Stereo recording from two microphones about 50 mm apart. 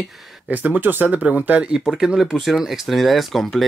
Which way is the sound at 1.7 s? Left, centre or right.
Centre.